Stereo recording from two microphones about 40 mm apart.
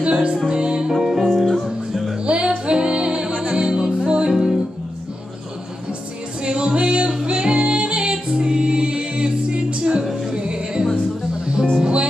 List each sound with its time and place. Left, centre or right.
0.0 s music: right
0.8 s music: centre
1.3 s music: centre
2.2 s music: right
6.4 s music: right
11.8 s music: right